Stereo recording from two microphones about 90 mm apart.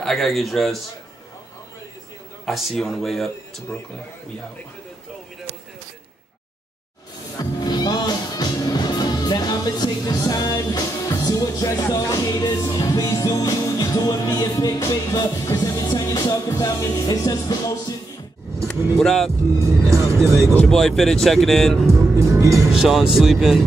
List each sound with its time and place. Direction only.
0.0 s speech: centre (ahead or behind)
2.4 s speech: centre (ahead or behind)
7.3 s music: 50° left (ahead or behind)
18.7 s speech: 5° left (ahead or behind)
19.8 s speech: 35° right (ahead or behind)
20.6 s speech: 5° left (ahead or behind)
21.9 s speech: 35° right (ahead or behind)
22.7 s speech: 5° right (ahead or behind)